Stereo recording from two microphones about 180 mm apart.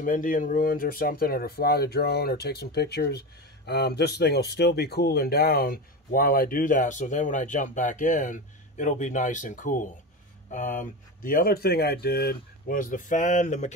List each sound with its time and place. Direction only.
0.0 s speech: 50° left (ahead or behind)